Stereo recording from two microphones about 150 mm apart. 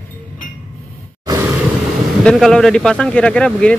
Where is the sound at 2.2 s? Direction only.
5° left (ahead or behind).